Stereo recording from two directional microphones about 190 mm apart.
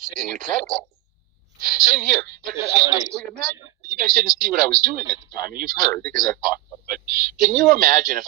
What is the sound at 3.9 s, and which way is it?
Speech, 50° right (ahead or behind).